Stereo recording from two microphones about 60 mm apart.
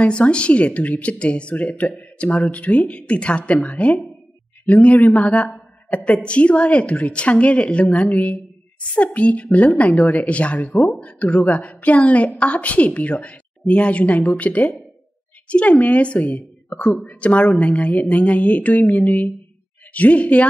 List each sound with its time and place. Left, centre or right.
0.0 s a woman's voice: centre